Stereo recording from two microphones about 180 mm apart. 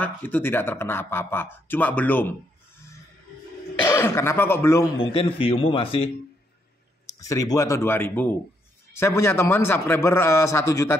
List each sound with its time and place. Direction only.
0.0 s speech: 10° left (ahead or behind)
3.8 s speech: 15° left (ahead or behind)
5.0 s a man's voice: 30° left (ahead or behind)
7.2 s speech: 20° left (ahead or behind)